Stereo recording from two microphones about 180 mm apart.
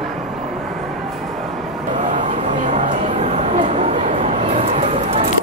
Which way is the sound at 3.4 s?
40° right (ahead or behind).